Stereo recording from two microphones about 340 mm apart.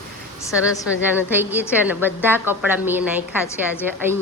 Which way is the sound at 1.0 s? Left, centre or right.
Centre.